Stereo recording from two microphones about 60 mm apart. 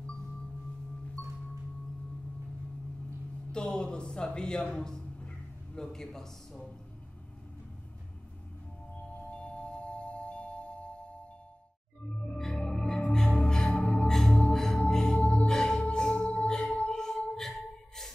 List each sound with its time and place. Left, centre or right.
3.5 s a man's voice: centre
9.0 s music: centre
12.4 s music: centre